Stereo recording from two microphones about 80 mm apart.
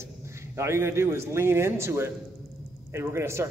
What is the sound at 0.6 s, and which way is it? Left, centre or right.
A man's voice, right.